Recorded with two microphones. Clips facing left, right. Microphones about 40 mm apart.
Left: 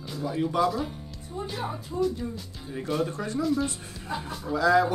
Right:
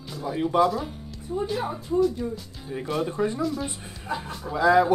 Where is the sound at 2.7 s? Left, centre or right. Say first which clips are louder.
Right 1 dB; centre.